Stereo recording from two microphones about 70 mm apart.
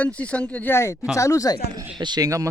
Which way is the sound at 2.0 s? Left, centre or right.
Right.